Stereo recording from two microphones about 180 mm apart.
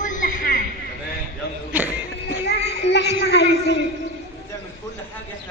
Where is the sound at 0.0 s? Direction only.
45° left (ahead or behind).